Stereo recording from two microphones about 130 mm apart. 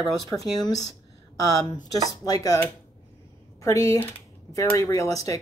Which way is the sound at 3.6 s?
25° left (ahead or behind).